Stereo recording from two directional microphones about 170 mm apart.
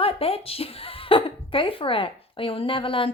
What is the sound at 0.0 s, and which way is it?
Speech, 35° left (ahead or behind).